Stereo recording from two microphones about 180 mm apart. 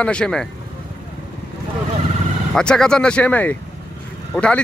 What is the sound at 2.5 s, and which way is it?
A man's voice, 5° left (ahead or behind).